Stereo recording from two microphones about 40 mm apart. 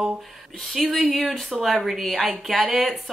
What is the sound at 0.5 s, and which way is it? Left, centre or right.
A woman's voice, centre.